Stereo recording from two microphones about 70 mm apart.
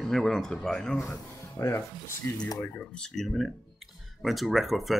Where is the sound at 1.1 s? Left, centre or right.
Left.